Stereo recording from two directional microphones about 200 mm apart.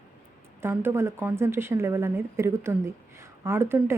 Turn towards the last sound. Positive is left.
turn(degrees=-10)  # may be behind; listen again after turning